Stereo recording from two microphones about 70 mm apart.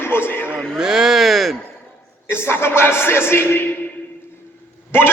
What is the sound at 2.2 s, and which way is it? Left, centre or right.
Speech, left.